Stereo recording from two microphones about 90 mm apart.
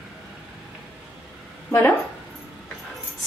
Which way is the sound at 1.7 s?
20° left (ahead or behind).